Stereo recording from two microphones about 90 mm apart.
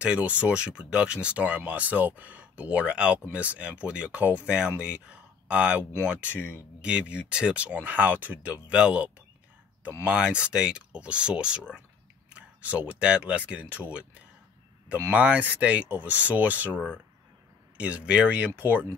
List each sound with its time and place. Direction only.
0.0 s speech: 15° right (ahead or behind)